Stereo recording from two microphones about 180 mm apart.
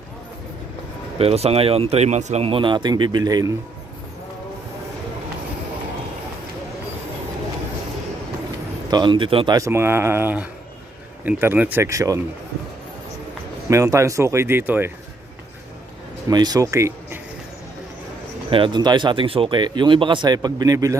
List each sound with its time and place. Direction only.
1.2 s speech: 35° right (ahead or behind)
8.9 s speech: 25° right (ahead or behind)
13.7 s speech: 15° right (ahead or behind)
16.3 s speech: 20° right (ahead or behind)
18.5 s speech: 25° right (ahead or behind)